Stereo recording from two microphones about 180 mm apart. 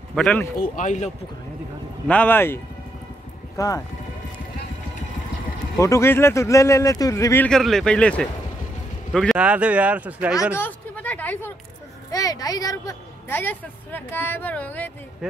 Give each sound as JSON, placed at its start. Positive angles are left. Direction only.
{"t": 0.1, "sound": "speech", "side_deg": 5}
{"t": 0.6, "sound": "speech", "side_deg": 45}
{"t": 2.0, "sound": "speech", "side_deg": 10}
{"t": 5.8, "sound": "speech", "side_deg": 15}
{"t": 7.4, "sound": "speech", "side_deg": 5}
{"t": 10.5, "sound": "a sound", "side_deg": 10}
{"t": 12.1, "sound": "speech", "side_deg": 20}